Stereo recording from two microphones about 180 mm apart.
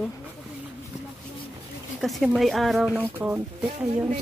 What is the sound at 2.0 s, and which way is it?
Speech, centre (ahead or behind).